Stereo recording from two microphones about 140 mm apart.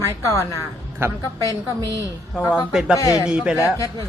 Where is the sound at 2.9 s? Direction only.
25° left (ahead or behind).